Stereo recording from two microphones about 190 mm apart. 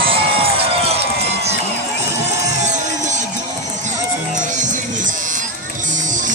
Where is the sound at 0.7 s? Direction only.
30° right (ahead or behind).